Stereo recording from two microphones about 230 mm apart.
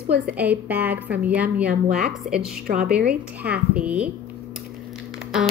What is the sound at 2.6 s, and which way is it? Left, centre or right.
Speech, right.